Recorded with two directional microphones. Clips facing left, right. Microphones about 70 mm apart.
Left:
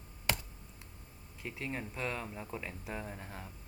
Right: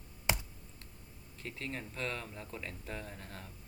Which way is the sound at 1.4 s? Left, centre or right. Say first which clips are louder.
Left 2 dB; centre.